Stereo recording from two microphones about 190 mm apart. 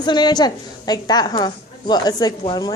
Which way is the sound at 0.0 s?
20° left (ahead or behind).